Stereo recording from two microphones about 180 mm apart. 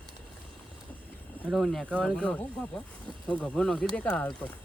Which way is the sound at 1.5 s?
Centre (ahead or behind).